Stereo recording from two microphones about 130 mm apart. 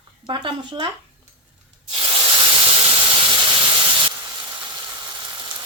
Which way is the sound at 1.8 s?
45° right (ahead or behind).